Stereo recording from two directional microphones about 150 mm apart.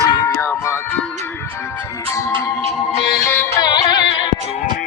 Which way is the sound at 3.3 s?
15° left (ahead or behind).